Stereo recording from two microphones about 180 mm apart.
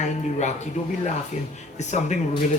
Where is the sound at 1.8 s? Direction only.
40° left (ahead or behind).